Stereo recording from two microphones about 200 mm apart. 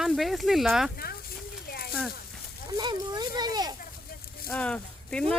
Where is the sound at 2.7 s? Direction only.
20° right (ahead or behind).